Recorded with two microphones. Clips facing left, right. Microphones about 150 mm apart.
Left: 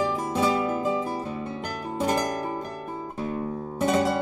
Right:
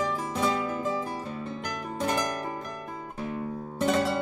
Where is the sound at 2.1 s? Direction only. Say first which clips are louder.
Left 3 dB; 30° left (ahead or behind).